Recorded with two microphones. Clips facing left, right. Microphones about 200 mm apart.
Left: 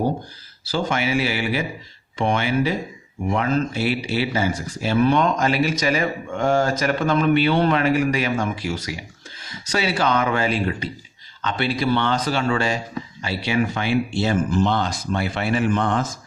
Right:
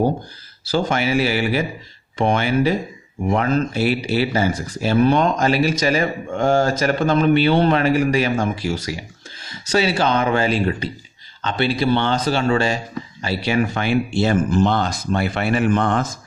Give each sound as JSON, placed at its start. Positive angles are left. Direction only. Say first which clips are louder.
{"t": 0.7, "sound": "speech", "louder": "right 3 dB", "side_deg": -40}
{"t": 13.2, "sound": "speech", "louder": "right 2 dB", "side_deg": -40}